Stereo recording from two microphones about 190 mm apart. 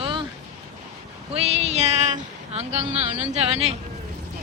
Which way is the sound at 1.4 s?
35° right (ahead or behind).